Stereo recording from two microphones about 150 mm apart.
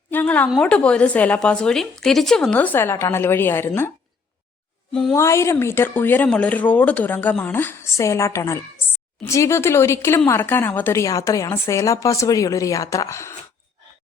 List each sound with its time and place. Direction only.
0.1 s a sound: 10° left (ahead or behind)
0.6 s speech: 10° left (ahead or behind)
5.1 s a woman's voice: 20° left (ahead or behind)